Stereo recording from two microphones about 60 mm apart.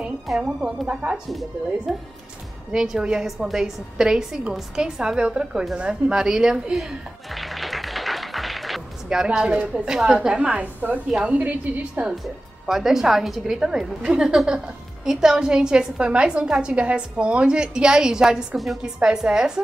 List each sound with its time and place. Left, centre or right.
0.6 s a woman's voice: centre
1.9 s a woman's voice: centre
5.8 s a sound: centre
9.9 s a woman's voice: centre
12.6 s a woman's voice: centre